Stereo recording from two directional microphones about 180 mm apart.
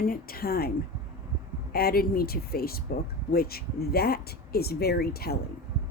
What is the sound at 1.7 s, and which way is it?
Speech, 60° left (ahead or behind).